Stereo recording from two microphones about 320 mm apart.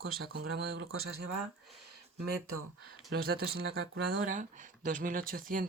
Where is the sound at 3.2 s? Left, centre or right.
Right.